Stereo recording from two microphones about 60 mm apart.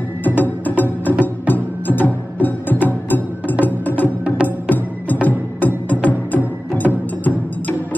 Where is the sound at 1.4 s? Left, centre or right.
Left.